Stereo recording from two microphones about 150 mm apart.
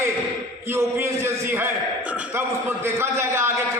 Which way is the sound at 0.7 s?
15° right (ahead or behind).